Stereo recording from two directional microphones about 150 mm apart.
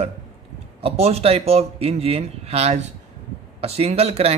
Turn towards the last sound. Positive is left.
turn(degrees=-40)  # may be behind; listen again after turning